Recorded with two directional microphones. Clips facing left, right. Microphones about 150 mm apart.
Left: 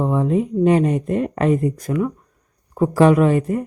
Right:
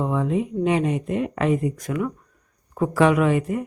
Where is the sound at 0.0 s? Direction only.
35° left (ahead or behind).